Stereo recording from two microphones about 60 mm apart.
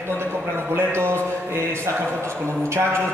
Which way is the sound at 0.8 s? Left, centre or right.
Right.